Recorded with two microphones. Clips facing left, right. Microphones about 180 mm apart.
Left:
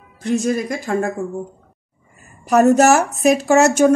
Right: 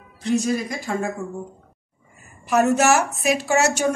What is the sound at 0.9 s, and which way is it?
Speech, 55° left (ahead or behind).